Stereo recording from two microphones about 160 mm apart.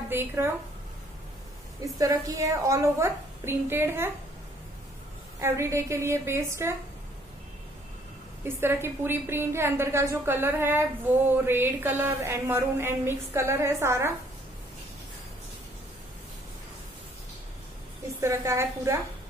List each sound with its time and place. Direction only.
0.1 s a woman's voice: 15° right (ahead or behind)
1.8 s a woman's voice: 20° right (ahead or behind)
5.4 s a woman's voice: 15° right (ahead or behind)
8.5 s a woman's voice: 15° right (ahead or behind)
18.2 s a woman's voice: 15° right (ahead or behind)